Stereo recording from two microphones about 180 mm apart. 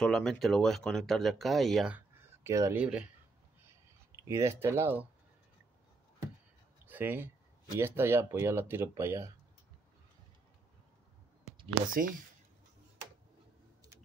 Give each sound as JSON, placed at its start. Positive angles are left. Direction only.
{"t": 0.0, "sound": "speech", "side_deg": 5}
{"t": 4.2, "sound": "speech", "side_deg": -15}
{"t": 6.9, "sound": "speech", "side_deg": -10}
{"t": 11.9, "sound": "speech", "side_deg": -50}